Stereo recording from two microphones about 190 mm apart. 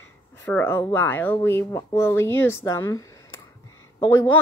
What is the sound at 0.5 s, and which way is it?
Speech, 10° left (ahead or behind).